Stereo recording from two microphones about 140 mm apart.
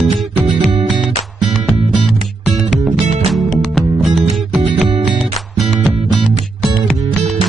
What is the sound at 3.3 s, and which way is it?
Music, centre (ahead or behind).